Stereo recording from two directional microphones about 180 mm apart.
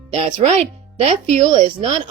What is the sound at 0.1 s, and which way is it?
Speech, 35° right (ahead or behind).